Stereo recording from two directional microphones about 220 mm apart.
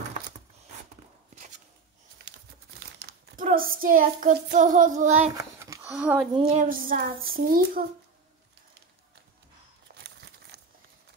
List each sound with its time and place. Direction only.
3.0 s crumpling: 45° right (ahead or behind)
3.4 s child singing: 40° right (ahead or behind)
5.3 s speech: 15° right (ahead or behind)
6.3 s child singing: 35° right (ahead or behind)
9.9 s crumpling: 45° right (ahead or behind)